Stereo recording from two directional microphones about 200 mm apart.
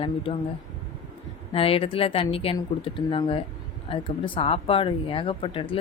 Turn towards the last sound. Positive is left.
turn(degrees=25)  # may be behind; listen again after turning